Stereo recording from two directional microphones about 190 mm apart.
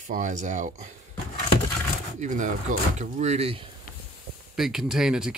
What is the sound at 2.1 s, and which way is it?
Speech, 40° right (ahead or behind).